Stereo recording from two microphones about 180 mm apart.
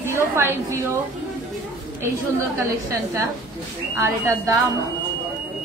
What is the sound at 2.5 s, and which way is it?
A woman's voice, 15° right (ahead or behind).